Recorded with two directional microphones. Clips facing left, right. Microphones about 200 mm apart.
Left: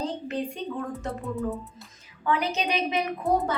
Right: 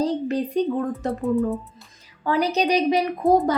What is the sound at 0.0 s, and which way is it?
Speech, 35° right (ahead or behind).